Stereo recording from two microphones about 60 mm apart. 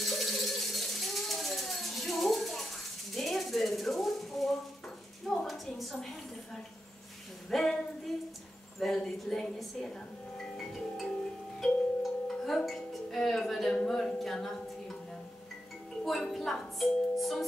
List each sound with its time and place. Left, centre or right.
0.0 s a sound: centre
9.6 s music: centre
16.0 s music: centre